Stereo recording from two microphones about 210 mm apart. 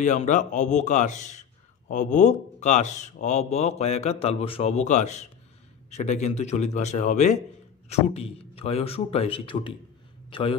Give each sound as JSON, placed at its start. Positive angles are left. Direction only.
{"t": 0.0, "sound": "a man's voice", "side_deg": 35}